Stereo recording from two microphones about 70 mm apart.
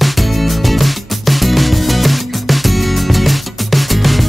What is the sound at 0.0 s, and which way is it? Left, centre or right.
Music, centre.